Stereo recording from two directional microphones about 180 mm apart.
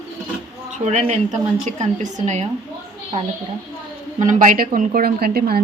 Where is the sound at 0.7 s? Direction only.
40° right (ahead or behind).